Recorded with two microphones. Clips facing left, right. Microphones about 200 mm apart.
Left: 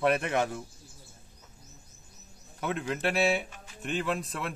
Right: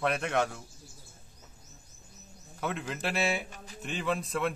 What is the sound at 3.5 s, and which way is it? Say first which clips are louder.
Music: right 3 dB; 40° right (ahead or behind).